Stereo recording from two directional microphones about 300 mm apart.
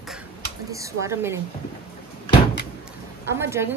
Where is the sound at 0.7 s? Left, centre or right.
Centre.